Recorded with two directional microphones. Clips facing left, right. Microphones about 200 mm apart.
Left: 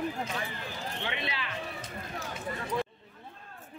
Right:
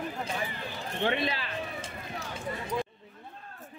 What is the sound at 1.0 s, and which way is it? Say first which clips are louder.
Speech: right 9 dB; 45° right (ahead or behind).